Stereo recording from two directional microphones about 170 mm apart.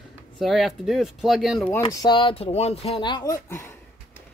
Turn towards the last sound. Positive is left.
turn(degrees=20)  # may be behind; listen again after turning